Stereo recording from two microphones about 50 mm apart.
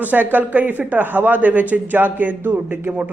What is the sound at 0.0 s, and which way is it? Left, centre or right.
Speech, right.